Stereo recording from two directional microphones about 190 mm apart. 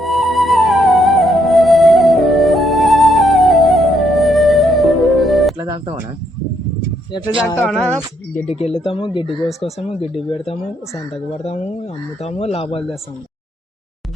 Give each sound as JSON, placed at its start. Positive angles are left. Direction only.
{"t": 0.0, "sound": "music", "side_deg": 0}
{"t": 5.6, "sound": "music", "side_deg": -25}
{"t": 7.6, "sound": "speech", "side_deg": 5}
{"t": 8.4, "sound": "speech", "side_deg": 35}
{"t": 12.2, "sound": "speech", "side_deg": 35}